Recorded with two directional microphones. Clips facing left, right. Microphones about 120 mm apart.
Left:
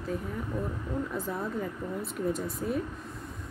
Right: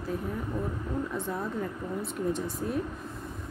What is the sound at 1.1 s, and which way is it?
Speech, centre (ahead or behind).